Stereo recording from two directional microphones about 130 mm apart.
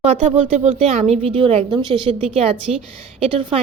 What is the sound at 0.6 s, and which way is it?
A woman's voice, 55° right (ahead or behind).